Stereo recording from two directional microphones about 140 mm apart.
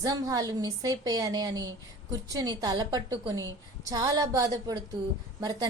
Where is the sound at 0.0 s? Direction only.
25° right (ahead or behind).